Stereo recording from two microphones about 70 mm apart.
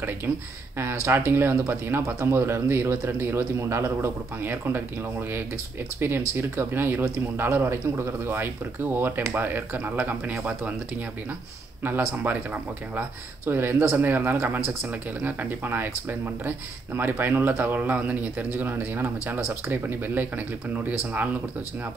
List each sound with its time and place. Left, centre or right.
1.0 s speech: right
5.9 s speech: right
11.8 s speech: right
13.5 s speech: right